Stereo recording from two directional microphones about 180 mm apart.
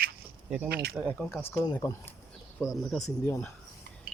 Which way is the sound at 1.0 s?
10° left (ahead or behind).